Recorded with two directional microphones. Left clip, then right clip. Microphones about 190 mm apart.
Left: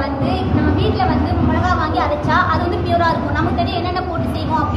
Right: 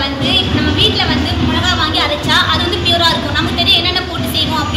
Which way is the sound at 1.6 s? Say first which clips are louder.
Right 5 dB; 15° right (ahead or behind).